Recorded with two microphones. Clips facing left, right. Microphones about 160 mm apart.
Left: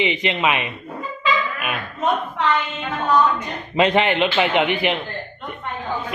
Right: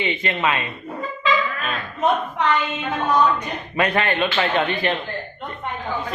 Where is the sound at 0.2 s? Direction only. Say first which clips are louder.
Left 2 dB; 15° left (ahead or behind).